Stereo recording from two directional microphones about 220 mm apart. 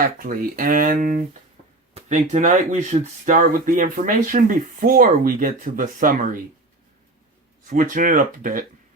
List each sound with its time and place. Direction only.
0.2 s speech: 40° right (ahead or behind)
7.7 s speech: 35° right (ahead or behind)